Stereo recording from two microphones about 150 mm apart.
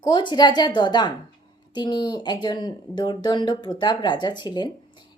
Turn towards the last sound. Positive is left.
turn(degrees=30)  # may be behind; listen again after turning